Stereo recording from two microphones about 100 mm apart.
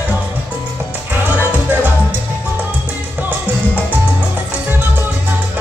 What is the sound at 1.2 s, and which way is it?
Music, 15° right (ahead or behind).